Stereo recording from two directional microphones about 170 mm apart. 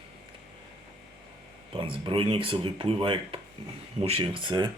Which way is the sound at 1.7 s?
30° right (ahead or behind).